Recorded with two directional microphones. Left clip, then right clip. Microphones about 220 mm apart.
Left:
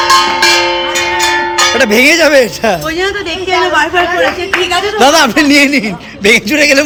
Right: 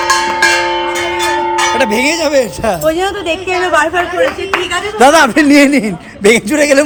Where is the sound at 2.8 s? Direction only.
45° right (ahead or behind).